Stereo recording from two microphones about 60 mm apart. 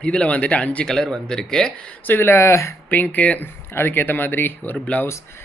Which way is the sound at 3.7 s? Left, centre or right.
Left.